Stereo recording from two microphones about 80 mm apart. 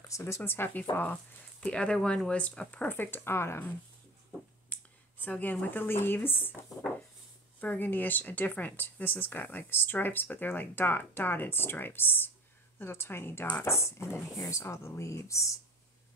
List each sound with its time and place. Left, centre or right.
0.1 s speech: left
1.6 s speech: centre; by 3.7 s left
4.7 s a sound: centre
5.2 s speech: left
7.6 s speech: left
14.3 s speech: left